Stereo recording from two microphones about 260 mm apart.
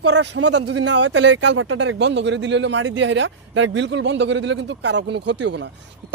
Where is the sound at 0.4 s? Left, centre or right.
Right.